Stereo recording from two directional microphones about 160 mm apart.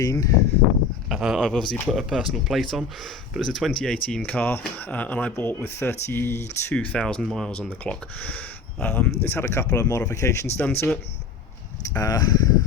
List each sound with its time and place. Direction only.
0.0 s speech: 20° left (ahead or behind)
1.0 s speech: centre (ahead or behind)
11.9 s speech: 25° left (ahead or behind)